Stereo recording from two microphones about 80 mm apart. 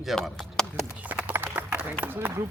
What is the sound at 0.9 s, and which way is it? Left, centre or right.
Run, centre.